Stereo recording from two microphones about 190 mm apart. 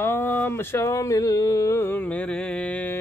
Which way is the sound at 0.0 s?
10° left (ahead or behind).